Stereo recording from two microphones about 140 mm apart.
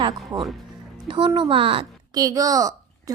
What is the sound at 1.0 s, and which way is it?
Speech, 35° right (ahead or behind).